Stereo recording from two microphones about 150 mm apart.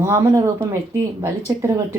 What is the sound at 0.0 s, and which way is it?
Speech, 20° right (ahead or behind).